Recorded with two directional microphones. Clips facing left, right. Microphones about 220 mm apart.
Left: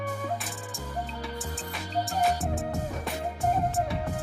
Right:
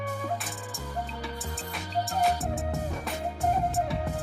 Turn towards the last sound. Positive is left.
turn(degrees=0)  # may be behind; listen again after turning